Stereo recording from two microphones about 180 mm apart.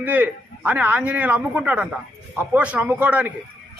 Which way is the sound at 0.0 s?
10° right (ahead or behind).